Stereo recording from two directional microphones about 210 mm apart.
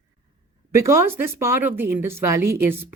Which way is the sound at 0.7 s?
15° right (ahead or behind).